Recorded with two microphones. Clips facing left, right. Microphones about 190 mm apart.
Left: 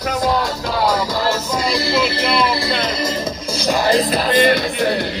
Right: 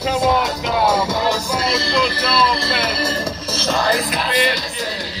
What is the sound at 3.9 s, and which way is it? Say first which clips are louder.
Music: left 5 dB; 35° left (ahead or behind).